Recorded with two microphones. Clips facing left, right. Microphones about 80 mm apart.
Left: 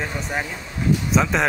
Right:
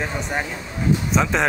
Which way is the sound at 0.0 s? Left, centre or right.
Centre.